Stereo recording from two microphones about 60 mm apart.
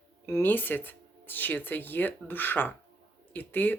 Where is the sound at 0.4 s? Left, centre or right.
Left.